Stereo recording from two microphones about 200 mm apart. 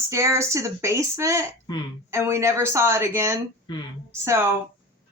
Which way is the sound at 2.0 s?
15° right (ahead or behind).